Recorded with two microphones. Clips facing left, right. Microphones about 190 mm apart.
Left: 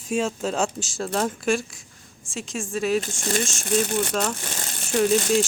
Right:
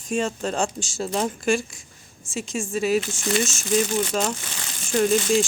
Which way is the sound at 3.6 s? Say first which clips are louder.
Left 1 dB; 60° left (ahead or behind).